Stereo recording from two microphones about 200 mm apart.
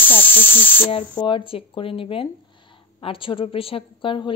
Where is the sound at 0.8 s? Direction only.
25° left (ahead or behind).